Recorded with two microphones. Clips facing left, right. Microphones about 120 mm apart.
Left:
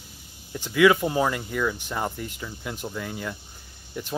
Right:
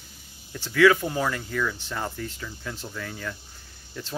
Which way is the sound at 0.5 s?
15° left (ahead or behind).